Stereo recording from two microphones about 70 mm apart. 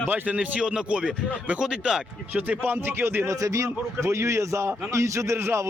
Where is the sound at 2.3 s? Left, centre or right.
Right.